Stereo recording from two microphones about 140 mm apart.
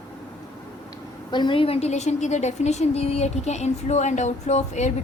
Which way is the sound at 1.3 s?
35° left (ahead or behind).